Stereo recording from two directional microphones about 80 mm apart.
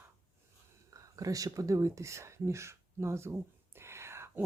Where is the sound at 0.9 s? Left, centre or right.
Right.